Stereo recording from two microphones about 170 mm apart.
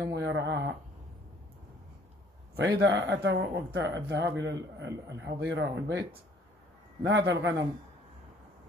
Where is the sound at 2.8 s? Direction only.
90° right.